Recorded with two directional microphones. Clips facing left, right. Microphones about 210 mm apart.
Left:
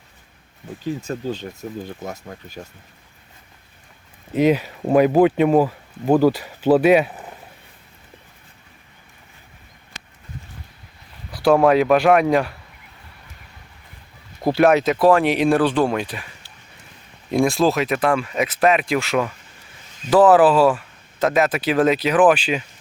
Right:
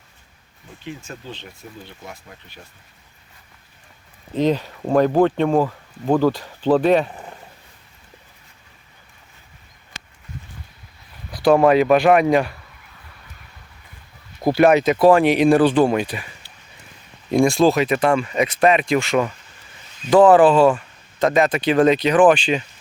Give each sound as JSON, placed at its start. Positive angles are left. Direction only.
{"t": 0.9, "sound": "speech", "side_deg": 40}
{"t": 4.4, "sound": "speech", "side_deg": 10}
{"t": 11.3, "sound": "a sound", "side_deg": 5}
{"t": 11.5, "sound": "speech", "side_deg": 0}
{"t": 14.4, "sound": "speech", "side_deg": 0}
{"t": 17.3, "sound": "speech", "side_deg": 0}